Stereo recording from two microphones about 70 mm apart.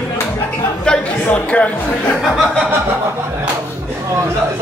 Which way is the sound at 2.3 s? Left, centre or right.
Centre.